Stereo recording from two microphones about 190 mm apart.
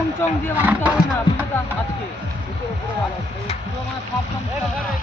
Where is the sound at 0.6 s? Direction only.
5° right (ahead or behind).